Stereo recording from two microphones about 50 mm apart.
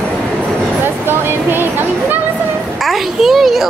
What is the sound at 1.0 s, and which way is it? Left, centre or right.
Speech, right.